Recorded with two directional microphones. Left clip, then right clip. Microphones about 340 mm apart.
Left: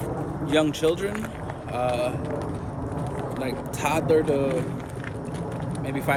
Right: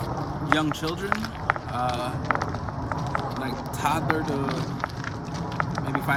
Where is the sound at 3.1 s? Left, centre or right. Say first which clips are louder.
Left 1 dB; centre.